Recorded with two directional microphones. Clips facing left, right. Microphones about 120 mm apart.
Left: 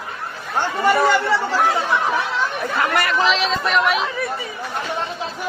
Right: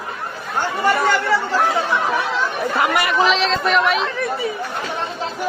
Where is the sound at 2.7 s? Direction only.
10° right (ahead or behind).